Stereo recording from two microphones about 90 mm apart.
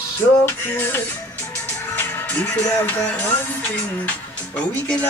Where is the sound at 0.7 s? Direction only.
25° left (ahead or behind).